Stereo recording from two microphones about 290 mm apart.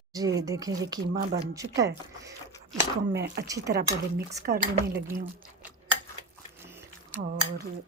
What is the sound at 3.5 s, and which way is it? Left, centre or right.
Speech, centre.